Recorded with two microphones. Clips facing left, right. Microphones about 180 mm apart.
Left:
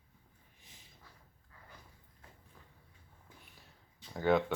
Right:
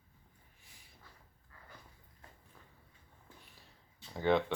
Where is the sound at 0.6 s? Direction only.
20° left (ahead or behind).